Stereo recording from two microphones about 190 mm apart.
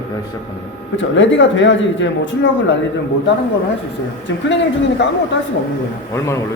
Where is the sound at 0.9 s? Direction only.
75° left (ahead or behind).